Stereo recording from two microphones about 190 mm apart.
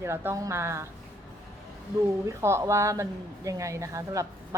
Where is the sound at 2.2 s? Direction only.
15° right (ahead or behind).